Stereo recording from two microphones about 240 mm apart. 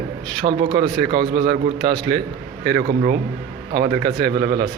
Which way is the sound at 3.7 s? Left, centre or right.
Right.